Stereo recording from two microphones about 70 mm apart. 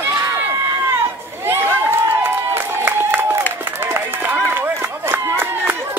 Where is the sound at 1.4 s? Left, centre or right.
Right.